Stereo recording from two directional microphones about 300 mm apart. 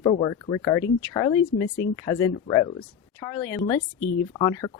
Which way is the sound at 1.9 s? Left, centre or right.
Centre.